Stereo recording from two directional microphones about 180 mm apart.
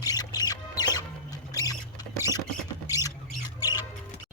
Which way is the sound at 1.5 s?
20° left (ahead or behind).